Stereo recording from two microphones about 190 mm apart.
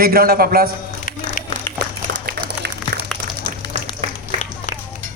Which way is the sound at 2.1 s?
50° right (ahead or behind).